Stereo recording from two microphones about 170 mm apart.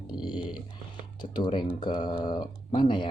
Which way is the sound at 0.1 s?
25° left (ahead or behind).